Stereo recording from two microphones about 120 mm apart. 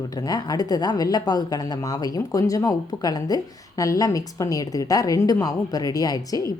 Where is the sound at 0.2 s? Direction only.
35° left (ahead or behind).